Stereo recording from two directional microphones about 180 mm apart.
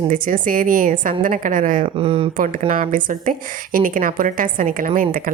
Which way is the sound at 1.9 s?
30° right (ahead or behind).